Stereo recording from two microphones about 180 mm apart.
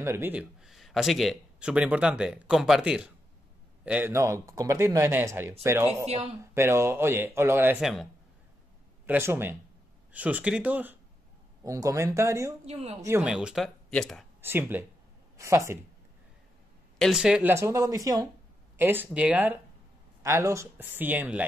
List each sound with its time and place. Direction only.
0.0 s speech: 15° right (ahead or behind)
6.0 s speech: 35° right (ahead or behind)
6.5 s speech: 15° right (ahead or behind)
7.8 s speech: centre (ahead or behind)
9.0 s speech: 10° right (ahead or behind)
12.6 s a woman's voice: 35° right (ahead or behind)
13.2 s speech: 5° right (ahead or behind)
14.4 s speech: 10° right (ahead or behind)
17.0 s speech: 5° right (ahead or behind)